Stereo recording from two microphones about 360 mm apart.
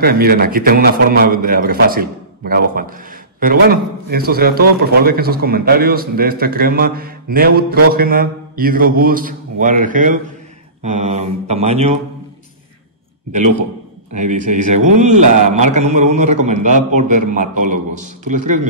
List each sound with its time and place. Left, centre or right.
0.0 s a man's voice: right
10.8 s mantra: centre
14.1 s a man's voice: centre